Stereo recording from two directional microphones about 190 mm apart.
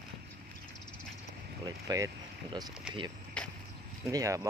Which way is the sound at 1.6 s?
20° right (ahead or behind).